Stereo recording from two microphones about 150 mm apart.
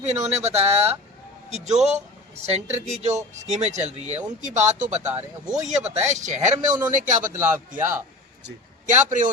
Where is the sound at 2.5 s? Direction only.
45° right (ahead or behind).